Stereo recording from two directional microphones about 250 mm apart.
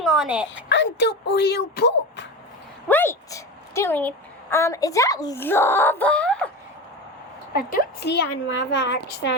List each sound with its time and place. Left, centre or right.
0.0 s a sound: centre
0.7 s speech: left
2.9 s a woman's voice: centre
7.7 s a woman's voice: left